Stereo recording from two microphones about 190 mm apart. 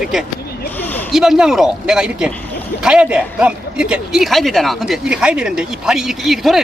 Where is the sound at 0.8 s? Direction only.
10° left (ahead or behind).